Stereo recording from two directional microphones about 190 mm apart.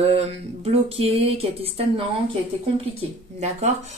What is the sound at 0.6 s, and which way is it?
Speech, 30° right (ahead or behind).